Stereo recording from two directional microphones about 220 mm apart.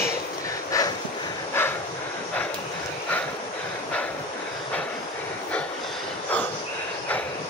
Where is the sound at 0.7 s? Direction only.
15° left (ahead or behind).